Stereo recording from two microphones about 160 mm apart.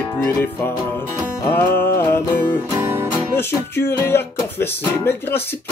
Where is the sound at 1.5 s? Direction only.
15° left (ahead or behind).